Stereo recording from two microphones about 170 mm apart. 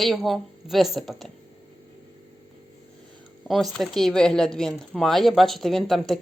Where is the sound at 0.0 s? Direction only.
Centre (ahead or behind).